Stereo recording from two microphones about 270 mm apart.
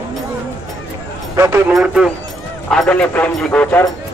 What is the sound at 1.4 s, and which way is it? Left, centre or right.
Speech, centre.